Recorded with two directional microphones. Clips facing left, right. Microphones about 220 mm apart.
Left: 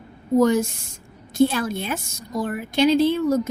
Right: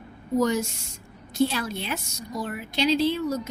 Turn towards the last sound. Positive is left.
turn(degrees=50)  # may be behind; listen again after turning